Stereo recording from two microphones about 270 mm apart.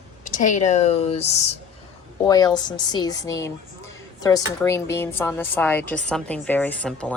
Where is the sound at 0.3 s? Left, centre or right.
Left.